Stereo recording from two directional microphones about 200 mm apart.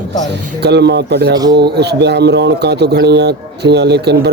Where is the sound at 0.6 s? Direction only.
55° right (ahead or behind).